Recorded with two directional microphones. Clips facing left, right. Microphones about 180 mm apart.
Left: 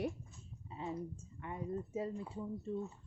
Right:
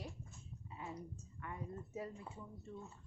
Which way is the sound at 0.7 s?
25° left (ahead or behind).